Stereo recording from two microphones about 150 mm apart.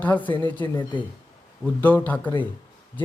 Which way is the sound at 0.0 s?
10° left (ahead or behind).